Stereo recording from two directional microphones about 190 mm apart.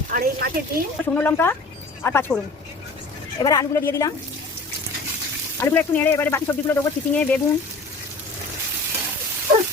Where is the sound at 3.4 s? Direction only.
20° left (ahead or behind).